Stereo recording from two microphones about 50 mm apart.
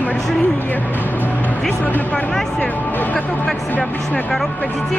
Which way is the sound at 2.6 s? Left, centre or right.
Left.